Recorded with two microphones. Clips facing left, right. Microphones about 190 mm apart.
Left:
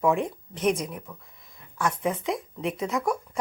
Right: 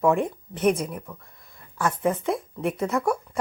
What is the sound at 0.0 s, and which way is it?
Speech, centre (ahead or behind).